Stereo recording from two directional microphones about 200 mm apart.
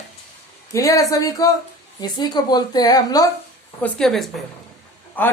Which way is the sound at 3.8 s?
Centre (ahead or behind).